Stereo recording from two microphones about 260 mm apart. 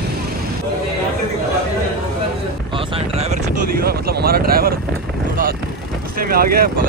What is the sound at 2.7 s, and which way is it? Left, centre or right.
Vehicle, centre.